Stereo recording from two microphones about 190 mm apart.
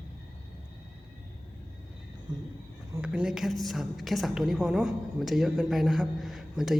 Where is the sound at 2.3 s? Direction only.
20° right (ahead or behind).